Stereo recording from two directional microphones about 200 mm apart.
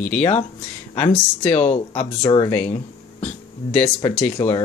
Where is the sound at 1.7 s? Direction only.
30° left (ahead or behind).